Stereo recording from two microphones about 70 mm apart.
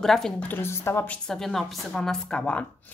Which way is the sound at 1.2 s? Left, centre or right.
Centre.